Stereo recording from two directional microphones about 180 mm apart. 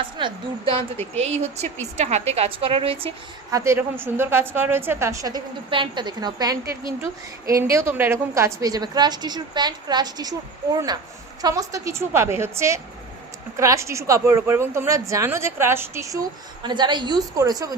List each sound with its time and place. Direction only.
0.2 s a woman's voice: 25° right (ahead or behind)
1.1 s a woman's voice: 35° right (ahead or behind)
3.5 s a woman's voice: 15° right (ahead or behind)